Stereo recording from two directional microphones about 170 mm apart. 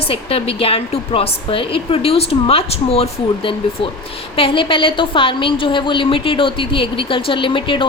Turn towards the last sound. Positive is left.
turn(degrees=30)  # may be behind; listen again after turning